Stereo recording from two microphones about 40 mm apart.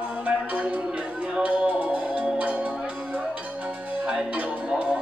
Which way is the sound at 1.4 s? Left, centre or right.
Right.